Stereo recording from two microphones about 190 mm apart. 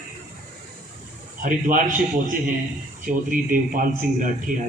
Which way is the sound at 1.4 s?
45° right (ahead or behind).